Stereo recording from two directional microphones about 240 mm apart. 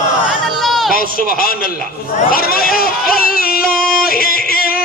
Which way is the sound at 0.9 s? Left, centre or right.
Left.